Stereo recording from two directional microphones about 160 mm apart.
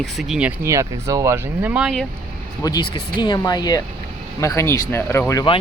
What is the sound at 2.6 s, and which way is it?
Speech, 25° left (ahead or behind).